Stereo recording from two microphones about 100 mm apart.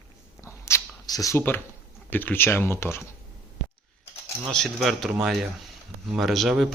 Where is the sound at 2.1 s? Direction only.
20° left (ahead or behind).